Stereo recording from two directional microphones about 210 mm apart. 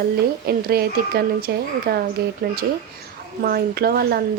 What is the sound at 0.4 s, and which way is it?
Speech, 45° right (ahead or behind).